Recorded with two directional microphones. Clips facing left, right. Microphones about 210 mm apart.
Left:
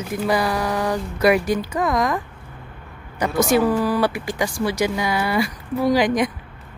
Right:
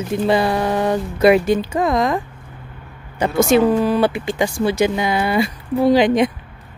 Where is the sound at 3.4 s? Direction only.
25° right (ahead or behind).